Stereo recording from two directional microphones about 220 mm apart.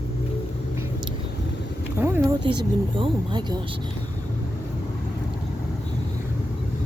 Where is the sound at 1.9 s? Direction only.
10° right (ahead or behind).